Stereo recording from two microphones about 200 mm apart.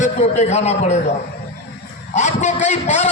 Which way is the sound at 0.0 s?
35° left (ahead or behind).